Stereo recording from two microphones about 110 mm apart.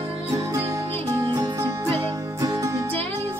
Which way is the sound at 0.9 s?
40° right (ahead or behind).